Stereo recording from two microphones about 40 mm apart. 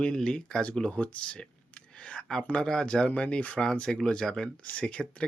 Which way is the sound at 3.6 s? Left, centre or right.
Left.